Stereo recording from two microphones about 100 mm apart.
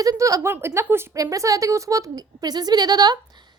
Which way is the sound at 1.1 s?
35° right (ahead or behind).